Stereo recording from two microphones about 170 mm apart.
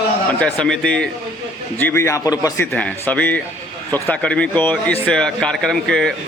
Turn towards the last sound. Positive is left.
turn(degrees=5)  # may be behind; listen again after turning